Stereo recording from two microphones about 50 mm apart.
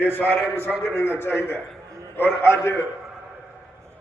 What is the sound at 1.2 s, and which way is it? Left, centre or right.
A man's voice, left.